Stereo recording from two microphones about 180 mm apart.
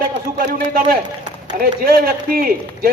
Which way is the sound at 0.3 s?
55° right (ahead or behind).